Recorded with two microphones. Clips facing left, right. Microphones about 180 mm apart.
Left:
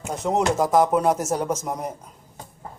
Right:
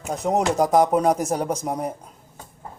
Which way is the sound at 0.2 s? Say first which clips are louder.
Right 1 dB; 35° right (ahead or behind).